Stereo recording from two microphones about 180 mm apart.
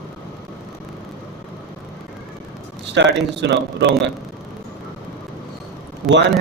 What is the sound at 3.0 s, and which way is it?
Speech, 70° right (ahead or behind).